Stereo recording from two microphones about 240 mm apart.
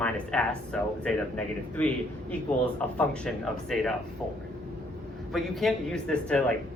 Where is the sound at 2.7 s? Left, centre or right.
Centre.